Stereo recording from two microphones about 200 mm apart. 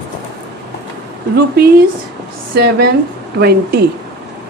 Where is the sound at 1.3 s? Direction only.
50° right (ahead or behind).